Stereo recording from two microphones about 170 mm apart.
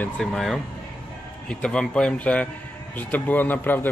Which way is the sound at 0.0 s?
Centre (ahead or behind).